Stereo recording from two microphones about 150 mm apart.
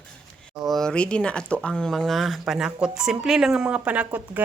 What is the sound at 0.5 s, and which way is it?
Speech, centre (ahead or behind).